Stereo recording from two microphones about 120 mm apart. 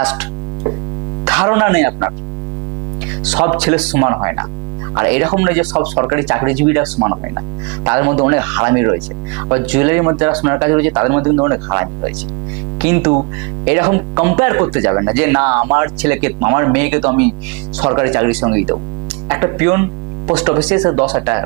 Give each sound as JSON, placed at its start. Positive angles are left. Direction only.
{"t": 0.0, "sound": "mains hum", "side_deg": -15}
{"t": 1.2, "sound": "speech", "side_deg": -20}
{"t": 3.2, "sound": "speech", "side_deg": -20}
{"t": 19.3, "sound": "mains hum", "side_deg": -25}
{"t": 20.8, "sound": "speech", "side_deg": -25}